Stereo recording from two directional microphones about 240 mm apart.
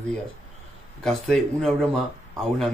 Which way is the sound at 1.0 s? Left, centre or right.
Centre.